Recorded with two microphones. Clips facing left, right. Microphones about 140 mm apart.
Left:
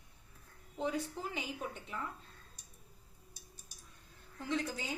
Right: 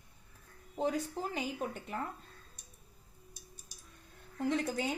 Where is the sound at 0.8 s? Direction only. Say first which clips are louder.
Right 3 dB; 40° right (ahead or behind).